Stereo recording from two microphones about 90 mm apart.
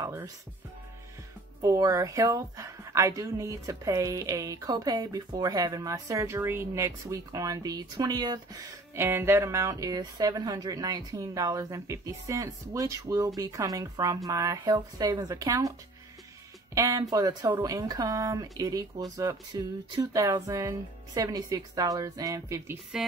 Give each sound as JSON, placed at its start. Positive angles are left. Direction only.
{"t": 1.6, "sound": "a woman's voice", "side_deg": -40}
{"t": 8.9, "sound": "a woman's voice", "side_deg": -30}
{"t": 16.7, "sound": "a woman's voice", "side_deg": -40}
{"t": 22.9, "sound": "a woman's voice", "side_deg": -5}